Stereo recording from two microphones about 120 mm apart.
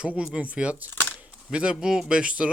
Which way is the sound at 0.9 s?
15° left (ahead or behind).